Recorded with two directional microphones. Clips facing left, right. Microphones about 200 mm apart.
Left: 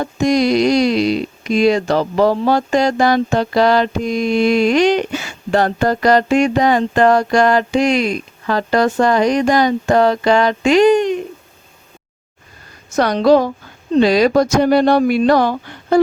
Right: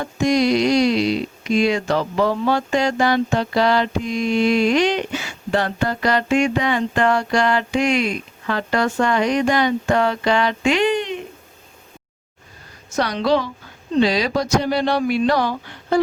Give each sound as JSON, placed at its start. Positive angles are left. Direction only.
{"t": 0.0, "sound": "speech", "side_deg": 40}
{"t": 13.0, "sound": "speech", "side_deg": 45}